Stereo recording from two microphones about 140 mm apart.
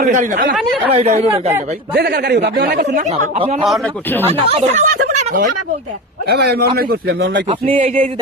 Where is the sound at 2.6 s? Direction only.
75° right (ahead or behind).